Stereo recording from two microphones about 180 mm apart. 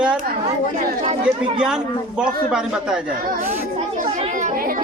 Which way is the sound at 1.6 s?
5° right (ahead or behind).